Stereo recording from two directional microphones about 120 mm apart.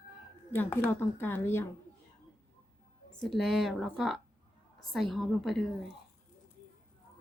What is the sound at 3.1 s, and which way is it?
Speech, centre (ahead or behind).